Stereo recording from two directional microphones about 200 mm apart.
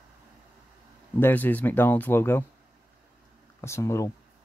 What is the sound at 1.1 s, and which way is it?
Speech, 10° left (ahead or behind).